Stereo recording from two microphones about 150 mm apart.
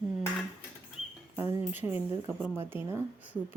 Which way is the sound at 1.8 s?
15° right (ahead or behind).